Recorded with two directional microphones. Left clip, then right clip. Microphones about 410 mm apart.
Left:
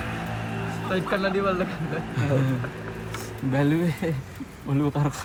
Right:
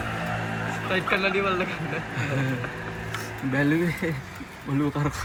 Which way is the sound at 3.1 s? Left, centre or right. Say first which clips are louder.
Left 1 dB; left.